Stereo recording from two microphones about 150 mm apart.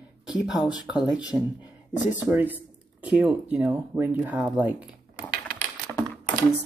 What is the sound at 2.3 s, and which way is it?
Speech, 10° right (ahead or behind).